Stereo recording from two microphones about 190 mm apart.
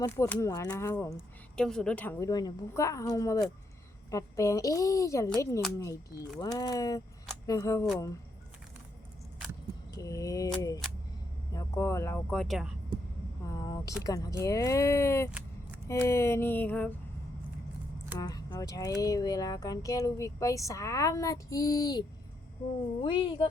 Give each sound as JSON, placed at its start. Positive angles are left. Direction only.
{"t": 0.0, "sound": "speech", "side_deg": 15}
{"t": 1.5, "sound": "speech", "side_deg": 5}
{"t": 9.9, "sound": "speech", "side_deg": 20}
{"t": 11.5, "sound": "speech", "side_deg": 15}
{"t": 13.4, "sound": "a sound", "side_deg": 20}
{"t": 14.0, "sound": "speech", "side_deg": 20}
{"t": 18.2, "sound": "speech", "side_deg": 20}
{"t": 23.0, "sound": "speech", "side_deg": 25}